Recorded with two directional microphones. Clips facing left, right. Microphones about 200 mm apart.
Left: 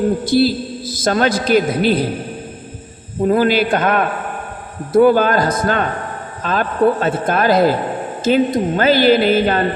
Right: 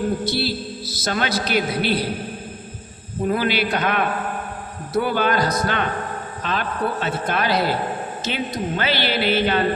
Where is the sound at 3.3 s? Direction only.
45° left (ahead or behind).